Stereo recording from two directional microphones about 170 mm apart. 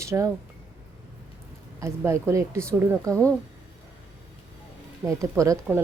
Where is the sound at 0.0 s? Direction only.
15° right (ahead or behind).